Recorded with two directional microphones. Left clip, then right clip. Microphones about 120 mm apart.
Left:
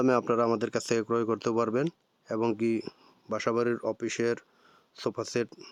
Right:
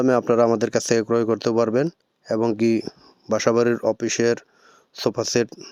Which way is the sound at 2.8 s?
35° right (ahead or behind).